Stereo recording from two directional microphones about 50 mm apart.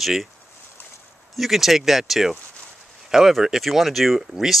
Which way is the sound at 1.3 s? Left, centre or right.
Centre.